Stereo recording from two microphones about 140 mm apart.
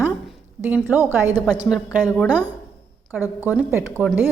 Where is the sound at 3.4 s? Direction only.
10° right (ahead or behind).